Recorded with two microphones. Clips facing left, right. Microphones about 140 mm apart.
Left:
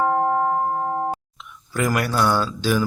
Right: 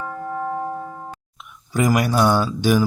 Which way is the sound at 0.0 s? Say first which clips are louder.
Left 10 dB; 70° left (ahead or behind).